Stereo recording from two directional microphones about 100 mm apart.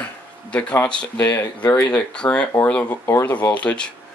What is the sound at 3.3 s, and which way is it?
Speech, 15° left (ahead or behind).